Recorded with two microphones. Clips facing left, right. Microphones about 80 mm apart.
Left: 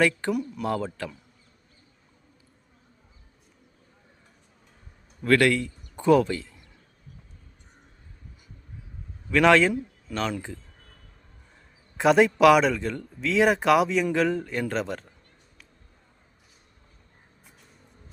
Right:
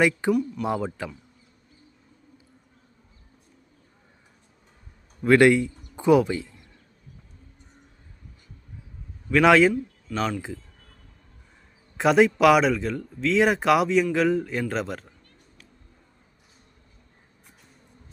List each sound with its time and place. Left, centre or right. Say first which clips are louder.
0.3 s speech: right 5 dB; centre
0.6 s speech: right 1 dB; centre
5.2 s speech: right 4 dB; centre
9.3 s speech: right 2 dB; centre
10.1 s speech: right 2 dB; centre
11.9 s speech: even; centre